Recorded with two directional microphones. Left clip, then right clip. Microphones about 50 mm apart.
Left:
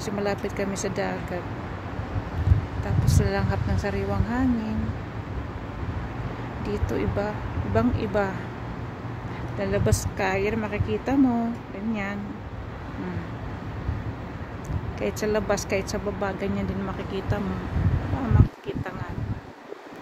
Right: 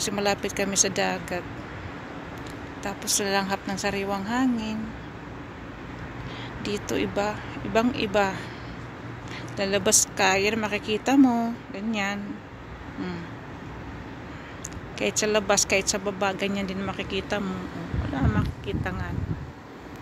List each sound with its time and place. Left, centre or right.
0.0 s speech: right
2.8 s speech: right
6.6 s speech: right
9.6 s speech: right
15.0 s speech: right